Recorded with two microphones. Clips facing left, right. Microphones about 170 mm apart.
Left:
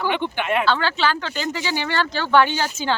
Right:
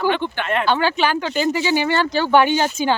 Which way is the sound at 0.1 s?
15° left (ahead or behind).